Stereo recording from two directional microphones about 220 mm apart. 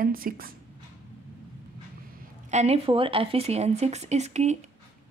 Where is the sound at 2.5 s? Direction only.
30° right (ahead or behind).